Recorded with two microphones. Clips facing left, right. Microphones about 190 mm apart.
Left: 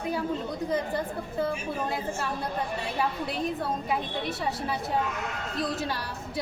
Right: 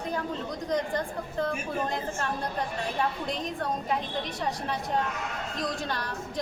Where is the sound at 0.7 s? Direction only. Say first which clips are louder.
Right 1 dB; 5° left (ahead or behind).